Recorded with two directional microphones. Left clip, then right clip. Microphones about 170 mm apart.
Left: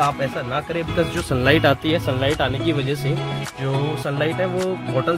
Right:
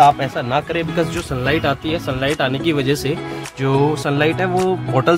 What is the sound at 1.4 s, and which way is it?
Speech, 35° left (ahead or behind).